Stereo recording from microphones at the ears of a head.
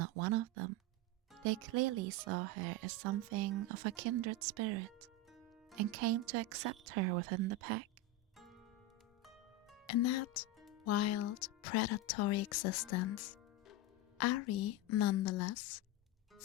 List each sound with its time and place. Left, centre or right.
0.0 s speech: right
9.8 s a woman's voice: left